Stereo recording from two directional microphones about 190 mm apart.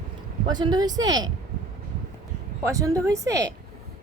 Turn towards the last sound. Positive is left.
turn(degrees=-15)  # may be behind; listen again after turning